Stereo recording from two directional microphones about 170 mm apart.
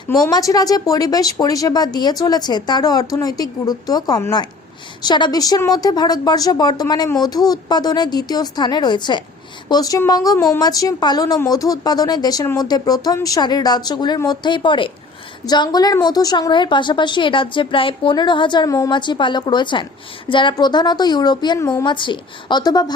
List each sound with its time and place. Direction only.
0.3 s speech: 20° left (ahead or behind)